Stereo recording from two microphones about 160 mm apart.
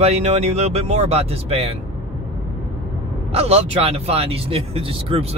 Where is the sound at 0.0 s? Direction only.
40° right (ahead or behind).